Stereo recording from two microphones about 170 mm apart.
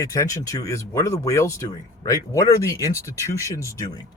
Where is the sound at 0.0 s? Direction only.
20° left (ahead or behind).